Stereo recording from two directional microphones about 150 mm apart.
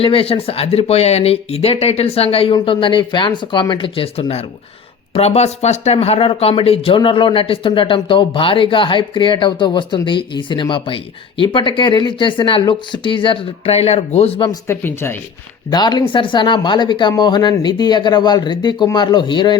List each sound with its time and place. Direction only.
0.0 s speech: 40° left (ahead or behind)
14.7 s speech: 15° left (ahead or behind)
15.7 s speech: 30° left (ahead or behind)